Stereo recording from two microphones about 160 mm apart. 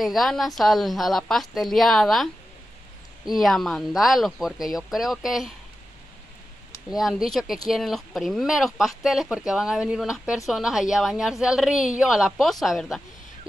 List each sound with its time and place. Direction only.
0.0 s speech: centre (ahead or behind)
3.3 s speech: centre (ahead or behind)
6.9 s speech: centre (ahead or behind)